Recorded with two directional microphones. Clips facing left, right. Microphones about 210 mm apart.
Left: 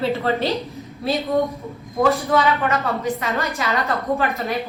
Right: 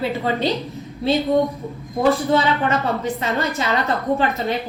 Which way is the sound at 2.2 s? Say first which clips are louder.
Right 1 dB; 30° right (ahead or behind).